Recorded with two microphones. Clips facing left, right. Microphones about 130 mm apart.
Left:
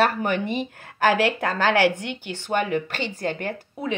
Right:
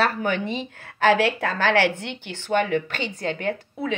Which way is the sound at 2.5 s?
40° left (ahead or behind).